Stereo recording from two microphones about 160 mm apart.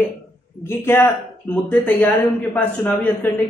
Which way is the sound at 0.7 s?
15° left (ahead or behind).